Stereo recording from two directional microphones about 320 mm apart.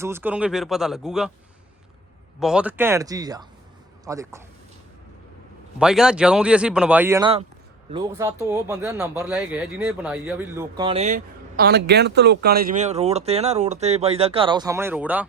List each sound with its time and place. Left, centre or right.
0.0 s speech: centre
2.4 s speech: centre
5.8 s speech: centre